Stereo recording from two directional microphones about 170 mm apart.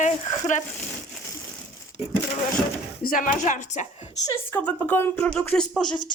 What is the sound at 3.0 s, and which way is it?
Speech, 55° left (ahead or behind).